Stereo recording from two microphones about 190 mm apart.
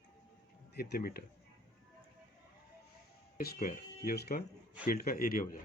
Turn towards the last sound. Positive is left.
turn(degrees=50)  # may be behind; listen again after turning